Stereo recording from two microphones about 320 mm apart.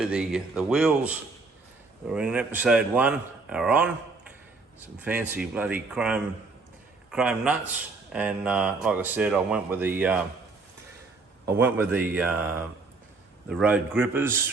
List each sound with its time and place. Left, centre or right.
0.0 s a man's voice: centre
11.4 s a man's voice: centre